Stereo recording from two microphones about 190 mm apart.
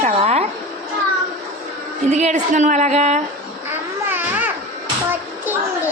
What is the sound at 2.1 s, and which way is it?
Speech, 40° right (ahead or behind).